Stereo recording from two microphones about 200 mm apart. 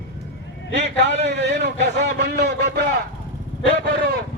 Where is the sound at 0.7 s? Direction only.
55° right (ahead or behind).